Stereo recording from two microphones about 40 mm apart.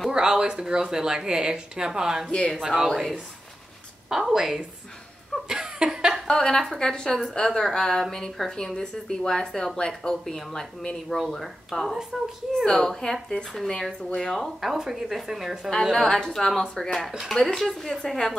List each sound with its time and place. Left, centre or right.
0.1 s speech: centre
2.3 s speech: centre
2.6 s speech: centre
4.1 s speech: centre
5.5 s a sound: centre
6.2 s a woman's voice: centre
12.5 s a woman's voice: centre
14.3 s speech: centre
15.8 s speech: centre
16.1 s a woman's voice: centre